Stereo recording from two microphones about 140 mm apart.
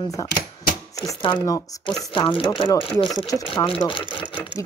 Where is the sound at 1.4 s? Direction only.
25° left (ahead or behind).